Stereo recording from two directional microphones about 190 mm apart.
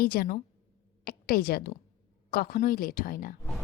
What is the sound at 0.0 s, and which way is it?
A woman's voice, 50° left (ahead or behind).